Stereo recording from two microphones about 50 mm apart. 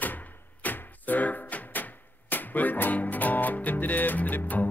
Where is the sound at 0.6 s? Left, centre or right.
Left.